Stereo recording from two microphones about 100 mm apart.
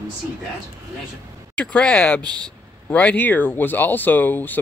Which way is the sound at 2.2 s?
45° right (ahead or behind).